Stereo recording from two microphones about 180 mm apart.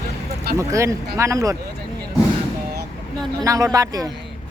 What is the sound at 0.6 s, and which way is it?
Speech, 15° right (ahead or behind).